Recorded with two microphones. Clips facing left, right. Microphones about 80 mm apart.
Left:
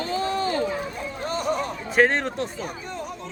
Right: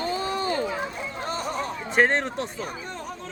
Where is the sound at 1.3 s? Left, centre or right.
Right.